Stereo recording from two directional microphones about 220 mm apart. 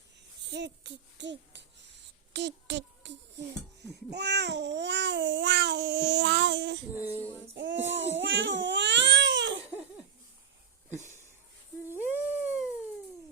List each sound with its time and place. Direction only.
0.4 s speech: 55° right (ahead or behind)
6.9 s child singing: 10° right (ahead or behind)
7.5 s child singing: 55° right (ahead or behind)
7.9 s baby cry: 55° right (ahead or behind)
12.1 s dog: centre (ahead or behind)